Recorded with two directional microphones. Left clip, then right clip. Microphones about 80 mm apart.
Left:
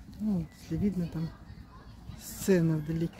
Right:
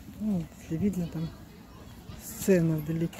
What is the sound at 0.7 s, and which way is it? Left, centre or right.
Speech, centre.